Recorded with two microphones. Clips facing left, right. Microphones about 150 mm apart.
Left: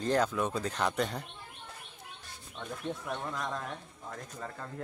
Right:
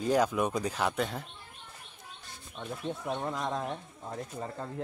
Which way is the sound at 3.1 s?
25° right (ahead or behind).